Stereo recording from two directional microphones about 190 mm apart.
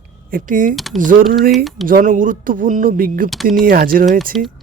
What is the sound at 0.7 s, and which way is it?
Speech, centre (ahead or behind).